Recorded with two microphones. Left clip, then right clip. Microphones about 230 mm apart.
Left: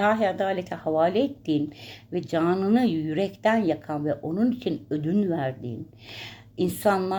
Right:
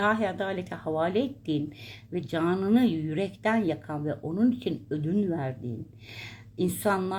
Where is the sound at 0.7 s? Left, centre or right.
Left.